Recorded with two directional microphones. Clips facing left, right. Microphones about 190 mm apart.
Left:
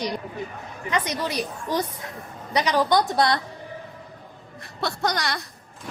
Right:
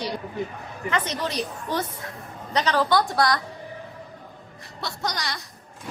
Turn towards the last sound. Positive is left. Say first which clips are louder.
# left 4 dB
turn(degrees=60)  # may be behind; listen again after turning